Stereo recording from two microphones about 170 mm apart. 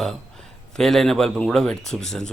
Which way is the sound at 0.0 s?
5° left (ahead or behind).